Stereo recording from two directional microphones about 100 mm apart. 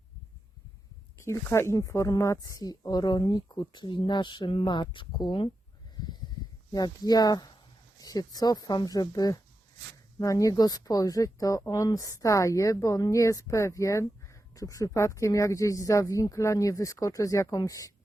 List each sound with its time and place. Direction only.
1.2 s speech: 25° left (ahead or behind); by 5.5 s 50° left (ahead or behind)
6.0 s a sound: 45° left (ahead or behind)
6.7 s a woman's voice: 40° left (ahead or behind)